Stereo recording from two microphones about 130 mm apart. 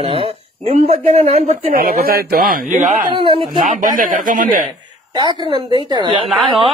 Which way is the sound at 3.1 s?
45° right (ahead or behind).